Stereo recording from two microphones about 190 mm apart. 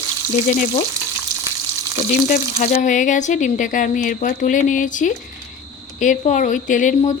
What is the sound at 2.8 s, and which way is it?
A woman's voice, 40° left (ahead or behind).